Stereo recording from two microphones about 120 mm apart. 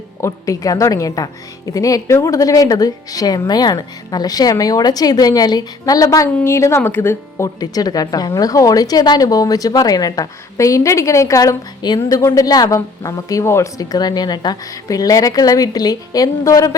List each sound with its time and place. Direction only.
0.2 s speech: 25° left (ahead or behind)